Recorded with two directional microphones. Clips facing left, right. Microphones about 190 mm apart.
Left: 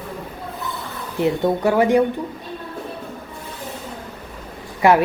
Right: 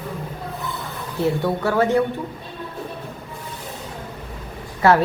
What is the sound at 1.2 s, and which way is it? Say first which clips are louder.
Speech: left 3 dB; 20° left (ahead or behind).